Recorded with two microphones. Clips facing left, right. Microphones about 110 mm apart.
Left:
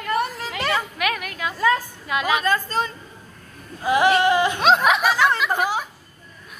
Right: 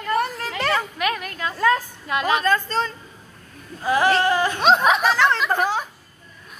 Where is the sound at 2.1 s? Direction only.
5° left (ahead or behind).